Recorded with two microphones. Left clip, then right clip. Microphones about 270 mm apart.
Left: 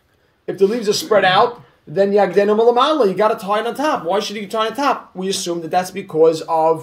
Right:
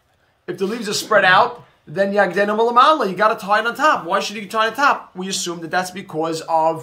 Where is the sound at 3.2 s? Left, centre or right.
Right.